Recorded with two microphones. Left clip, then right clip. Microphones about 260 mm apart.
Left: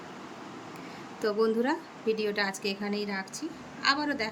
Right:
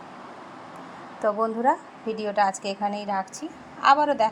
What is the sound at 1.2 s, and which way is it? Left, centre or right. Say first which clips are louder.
Speech: right 3 dB; centre.